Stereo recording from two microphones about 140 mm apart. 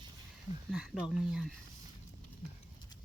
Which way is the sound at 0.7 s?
5° right (ahead or behind).